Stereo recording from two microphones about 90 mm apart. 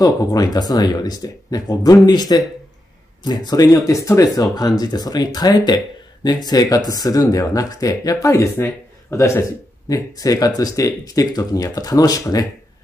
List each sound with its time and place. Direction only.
0.0 s speech: 45° left (ahead or behind)